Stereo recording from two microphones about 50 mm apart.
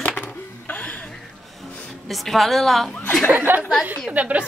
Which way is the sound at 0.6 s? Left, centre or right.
Left.